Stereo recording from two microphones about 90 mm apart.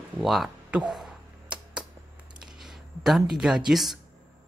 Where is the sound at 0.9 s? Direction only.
5° right (ahead or behind).